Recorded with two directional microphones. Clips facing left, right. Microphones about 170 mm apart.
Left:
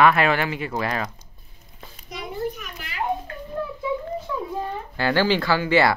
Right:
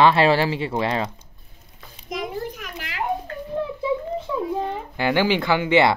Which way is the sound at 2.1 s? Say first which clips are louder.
Right 1 dB; 90° right.